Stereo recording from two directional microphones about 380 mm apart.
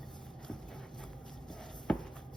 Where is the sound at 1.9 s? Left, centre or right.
Centre.